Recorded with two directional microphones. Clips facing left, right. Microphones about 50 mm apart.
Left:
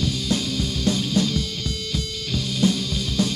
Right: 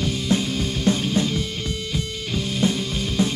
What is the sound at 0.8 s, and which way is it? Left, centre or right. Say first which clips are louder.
Music: right 1 dB; right.